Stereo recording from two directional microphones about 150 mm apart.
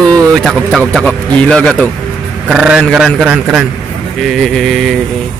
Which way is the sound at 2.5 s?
5° right (ahead or behind).